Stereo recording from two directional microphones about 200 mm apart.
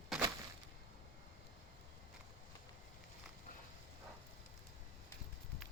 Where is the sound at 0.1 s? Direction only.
Centre (ahead or behind).